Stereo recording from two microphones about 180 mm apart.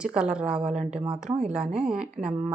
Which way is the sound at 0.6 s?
40° right (ahead or behind).